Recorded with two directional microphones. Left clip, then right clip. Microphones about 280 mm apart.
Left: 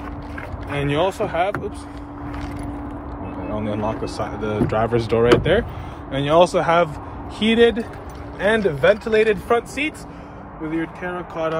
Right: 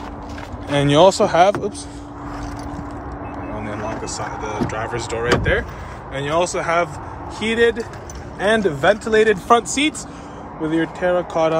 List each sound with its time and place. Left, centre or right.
0.7 s speech: right
3.5 s speech: centre